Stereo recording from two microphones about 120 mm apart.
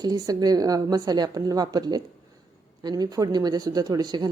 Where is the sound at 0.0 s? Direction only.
30° right (ahead or behind).